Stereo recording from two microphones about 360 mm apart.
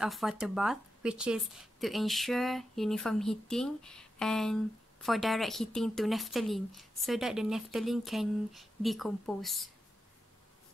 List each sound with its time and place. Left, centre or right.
0.0 s speech: centre